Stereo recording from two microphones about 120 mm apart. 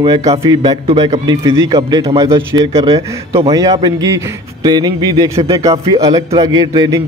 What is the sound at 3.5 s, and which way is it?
A man's voice, 30° right (ahead or behind).